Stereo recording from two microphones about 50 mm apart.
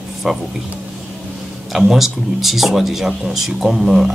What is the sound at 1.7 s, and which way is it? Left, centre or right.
Speech, centre.